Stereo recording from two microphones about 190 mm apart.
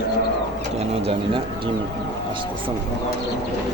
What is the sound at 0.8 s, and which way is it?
Speech, 30° right (ahead or behind).